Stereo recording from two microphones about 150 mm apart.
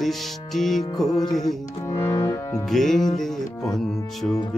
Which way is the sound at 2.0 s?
25° left (ahead or behind).